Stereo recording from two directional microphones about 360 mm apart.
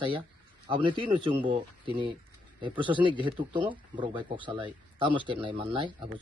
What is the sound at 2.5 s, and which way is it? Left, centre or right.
Speech, centre.